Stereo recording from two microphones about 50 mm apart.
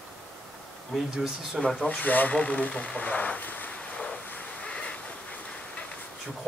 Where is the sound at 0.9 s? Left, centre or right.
Centre.